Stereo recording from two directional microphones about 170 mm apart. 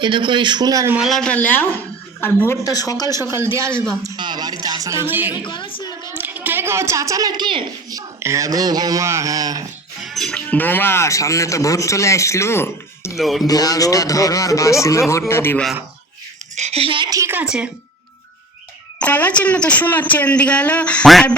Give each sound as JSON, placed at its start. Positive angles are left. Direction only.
{"t": 0.0, "sound": "speech", "side_deg": -30}
{"t": 0.9, "sound": "speech", "side_deg": 0}
{"t": 3.4, "sound": "speech", "side_deg": -15}
{"t": 5.3, "sound": "a woman's voice", "side_deg": 25}
{"t": 6.1, "sound": "a woman's voice", "side_deg": -10}
{"t": 10.0, "sound": "speech", "side_deg": 0}
{"t": 13.1, "sound": "speech", "side_deg": 0}
{"t": 13.5, "sound": "speech", "side_deg": 20}
{"t": 16.6, "sound": "speech", "side_deg": -40}
{"t": 18.9, "sound": "speech", "side_deg": 10}